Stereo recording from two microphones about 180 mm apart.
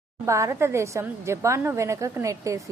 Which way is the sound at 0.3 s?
15° right (ahead or behind).